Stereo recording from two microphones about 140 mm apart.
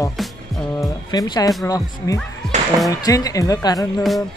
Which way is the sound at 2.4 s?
5° left (ahead or behind).